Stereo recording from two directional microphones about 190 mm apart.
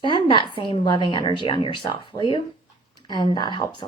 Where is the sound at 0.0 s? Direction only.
25° left (ahead or behind).